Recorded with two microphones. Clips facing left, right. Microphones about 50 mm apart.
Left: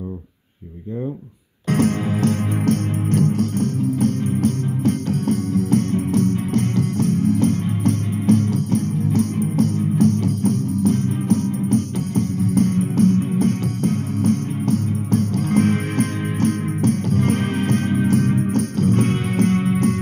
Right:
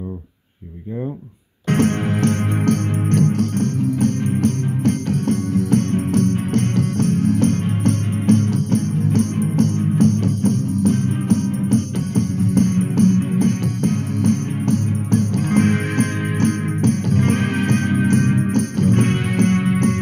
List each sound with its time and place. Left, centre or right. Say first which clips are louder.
1.7 s music: right 1 dB; right